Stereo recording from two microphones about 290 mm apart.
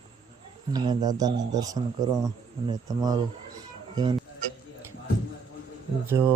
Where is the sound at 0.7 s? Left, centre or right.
Centre.